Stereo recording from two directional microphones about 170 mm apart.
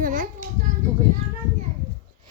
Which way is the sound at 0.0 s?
50° right (ahead or behind).